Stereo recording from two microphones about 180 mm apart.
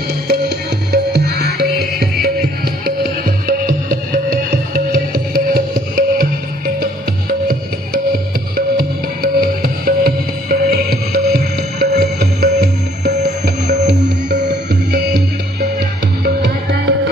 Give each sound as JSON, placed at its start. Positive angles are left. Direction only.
{"t": 0.3, "sound": "music", "side_deg": -65}
{"t": 2.8, "sound": "music", "side_deg": -55}
{"t": 8.5, "sound": "music", "side_deg": -55}
{"t": 14.7, "sound": "music", "side_deg": -65}
{"t": 16.4, "sound": "music", "side_deg": -75}